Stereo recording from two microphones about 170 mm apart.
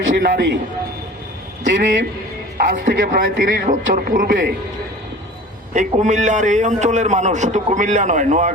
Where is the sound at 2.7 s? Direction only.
50° right (ahead or behind).